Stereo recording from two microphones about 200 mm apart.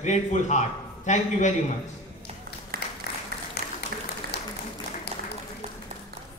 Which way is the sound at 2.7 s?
45° right (ahead or behind).